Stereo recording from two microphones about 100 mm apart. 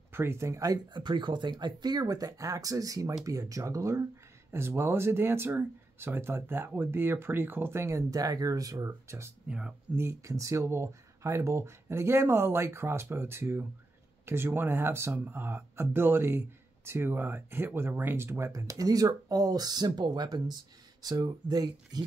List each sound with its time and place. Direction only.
0.1 s speech: 25° right (ahead or behind)
0.9 s speech: 50° right (ahead or behind); by 9.3 s 30° right (ahead or behind)
9.5 s speech: 10° right (ahead or behind)
9.9 s speech: 30° right (ahead or behind)